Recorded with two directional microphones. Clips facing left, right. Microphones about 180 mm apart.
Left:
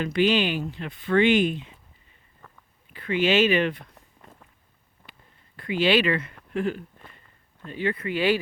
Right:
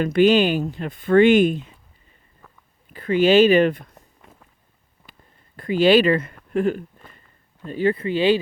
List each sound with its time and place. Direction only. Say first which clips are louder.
0.0 s speech: right 6 dB; 45° right (ahead or behind)
2.4 s a sound: even; 5° right (ahead or behind)
2.9 s speech: right 7 dB; 40° right (ahead or behind)
4.2 s walk: left 3 dB; centre (ahead or behind)
5.0 s a sound: right 1 dB; centre (ahead or behind)
5.5 s speech: right 6 dB; 40° right (ahead or behind); by 8.4 s 25° right (ahead or behind)